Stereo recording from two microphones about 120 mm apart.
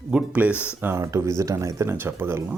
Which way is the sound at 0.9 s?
25° right (ahead or behind).